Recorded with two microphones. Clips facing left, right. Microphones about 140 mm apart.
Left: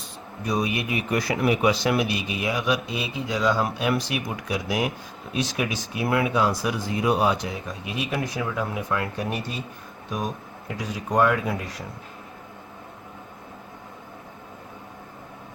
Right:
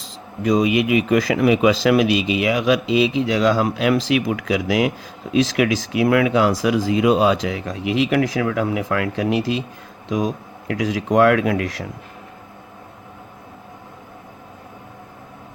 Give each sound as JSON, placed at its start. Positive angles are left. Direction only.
{"t": 0.0, "sound": "speech", "side_deg": -90}